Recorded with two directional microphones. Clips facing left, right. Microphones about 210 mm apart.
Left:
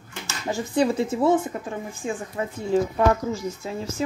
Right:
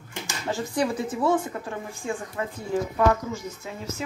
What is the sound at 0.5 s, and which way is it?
A woman's voice, 25° left (ahead or behind).